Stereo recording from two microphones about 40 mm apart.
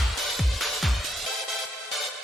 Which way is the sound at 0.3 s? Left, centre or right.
Centre.